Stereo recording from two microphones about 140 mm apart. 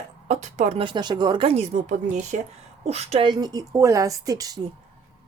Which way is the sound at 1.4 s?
50° right (ahead or behind).